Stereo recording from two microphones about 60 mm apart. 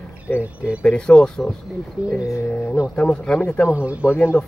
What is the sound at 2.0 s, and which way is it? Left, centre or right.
Speech, left.